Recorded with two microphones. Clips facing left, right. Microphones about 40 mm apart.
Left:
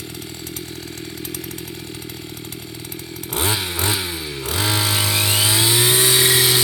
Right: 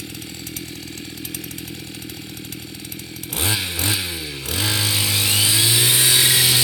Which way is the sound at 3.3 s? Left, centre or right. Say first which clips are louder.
Left 2 dB; centre.